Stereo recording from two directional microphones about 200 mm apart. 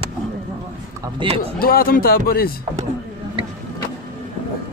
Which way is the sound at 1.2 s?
25° right (ahead or behind).